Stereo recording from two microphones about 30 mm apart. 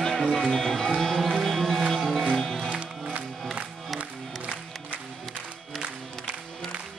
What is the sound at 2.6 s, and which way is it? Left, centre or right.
Music, right.